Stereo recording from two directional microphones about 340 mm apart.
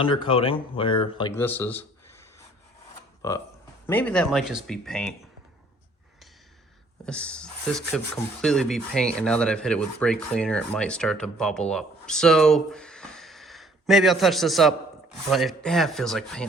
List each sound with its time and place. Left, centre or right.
0.0 s speech: centre
3.2 s speech: centre
7.0 s speech: centre